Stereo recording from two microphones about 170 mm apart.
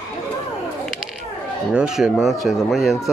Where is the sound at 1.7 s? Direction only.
5° right (ahead or behind).